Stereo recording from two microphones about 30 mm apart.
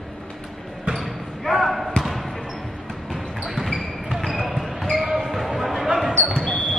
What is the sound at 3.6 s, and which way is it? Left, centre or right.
Basketball bounce, centre.